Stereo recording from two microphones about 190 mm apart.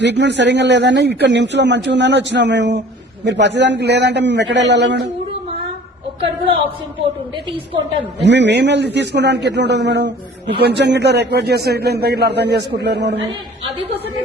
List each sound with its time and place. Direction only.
0.0 s a man's voice: 65° right (ahead or behind)
8.2 s a man's voice: 65° right (ahead or behind)